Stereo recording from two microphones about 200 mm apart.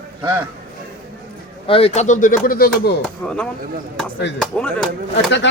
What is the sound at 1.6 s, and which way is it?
Speech, 30° left (ahead or behind).